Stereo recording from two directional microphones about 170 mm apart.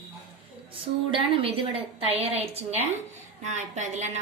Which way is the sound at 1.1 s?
30° right (ahead or behind).